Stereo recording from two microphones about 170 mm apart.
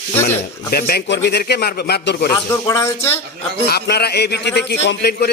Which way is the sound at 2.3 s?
20° left (ahead or behind).